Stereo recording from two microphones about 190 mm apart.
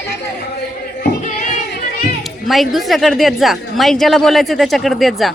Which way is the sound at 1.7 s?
55° left (ahead or behind).